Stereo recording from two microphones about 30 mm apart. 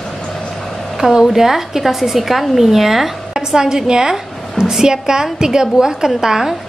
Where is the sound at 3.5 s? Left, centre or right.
Right.